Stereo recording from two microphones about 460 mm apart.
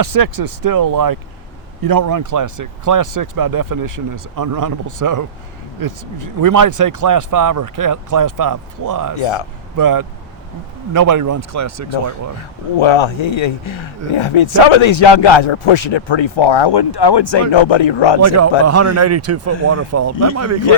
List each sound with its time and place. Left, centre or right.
0.0 s speech: right
9.2 s a man's voice: left
9.7 s speech: right
12.7 s speech: left
17.5 s speech: left
18.2 s speech: right